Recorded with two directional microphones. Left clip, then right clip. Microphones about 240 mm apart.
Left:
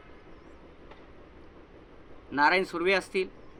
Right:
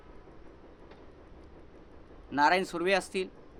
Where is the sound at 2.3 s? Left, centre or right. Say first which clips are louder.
Left 1 dB; right.